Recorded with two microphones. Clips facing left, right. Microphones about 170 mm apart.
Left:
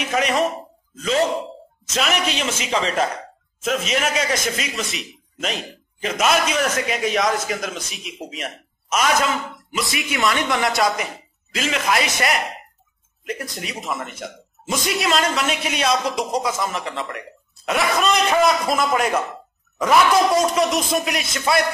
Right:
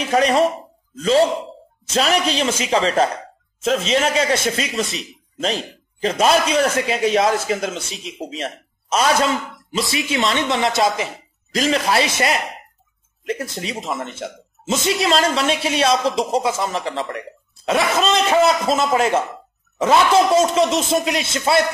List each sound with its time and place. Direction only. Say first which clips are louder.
0.0 s speech: right 4 dB; 35° right (ahead or behind)
4.8 s speech: right 2 dB; centre (ahead or behind)
5.4 s speech: right 4 dB; 30° right (ahead or behind)
11.5 s speech: right 4 dB; 35° right (ahead or behind)